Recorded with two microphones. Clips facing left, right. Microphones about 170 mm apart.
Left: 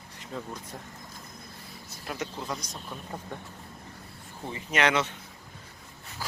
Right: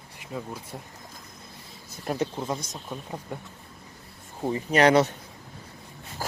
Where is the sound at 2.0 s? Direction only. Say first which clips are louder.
Right 8 dB; 40° right (ahead or behind).